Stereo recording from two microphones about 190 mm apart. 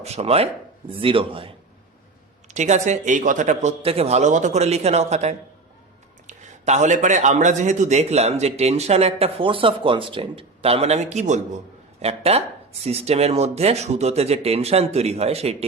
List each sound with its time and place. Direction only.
0.0 s a man's voice: 35° right (ahead or behind)